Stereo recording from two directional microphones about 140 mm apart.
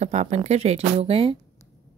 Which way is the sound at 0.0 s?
55° right (ahead or behind).